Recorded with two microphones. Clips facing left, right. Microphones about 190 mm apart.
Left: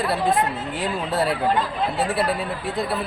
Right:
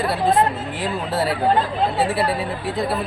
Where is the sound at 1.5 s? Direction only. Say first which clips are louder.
Right 3 dB; 35° right (ahead or behind).